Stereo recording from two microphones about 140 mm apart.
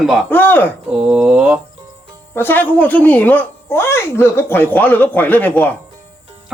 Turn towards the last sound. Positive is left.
turn(degrees=10)  # may be behind; listen again after turning